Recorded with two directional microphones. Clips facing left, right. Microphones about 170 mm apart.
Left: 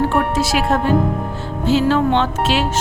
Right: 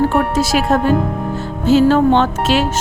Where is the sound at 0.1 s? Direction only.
40° right (ahead or behind).